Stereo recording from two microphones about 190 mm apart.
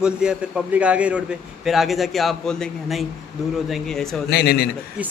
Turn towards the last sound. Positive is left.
turn(degrees=55)  # may be behind; listen again after turning